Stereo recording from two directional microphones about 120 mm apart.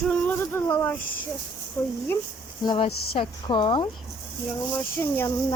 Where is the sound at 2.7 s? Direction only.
50° left (ahead or behind).